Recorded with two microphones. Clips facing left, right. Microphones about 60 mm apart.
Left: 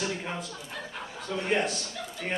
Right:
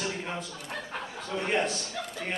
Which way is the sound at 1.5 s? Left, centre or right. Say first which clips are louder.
Left 1 dB; centre.